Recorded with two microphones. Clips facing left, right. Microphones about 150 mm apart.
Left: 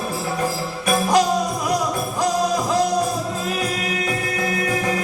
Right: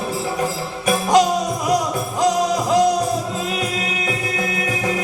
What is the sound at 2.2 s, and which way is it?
Music, 20° right (ahead or behind).